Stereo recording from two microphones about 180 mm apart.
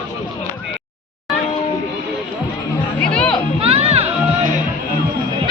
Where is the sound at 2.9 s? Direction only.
5° left (ahead or behind).